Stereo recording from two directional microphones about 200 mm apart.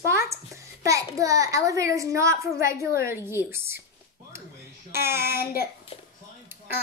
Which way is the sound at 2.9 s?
45° left (ahead or behind).